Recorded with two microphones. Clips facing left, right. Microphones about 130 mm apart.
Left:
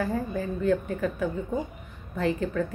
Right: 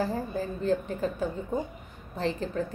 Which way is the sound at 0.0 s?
30° right (ahead or behind).